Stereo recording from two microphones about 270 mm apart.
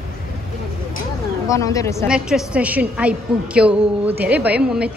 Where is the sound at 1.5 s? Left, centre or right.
Centre.